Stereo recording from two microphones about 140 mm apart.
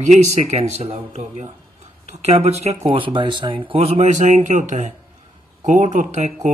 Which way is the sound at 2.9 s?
35° right (ahead or behind).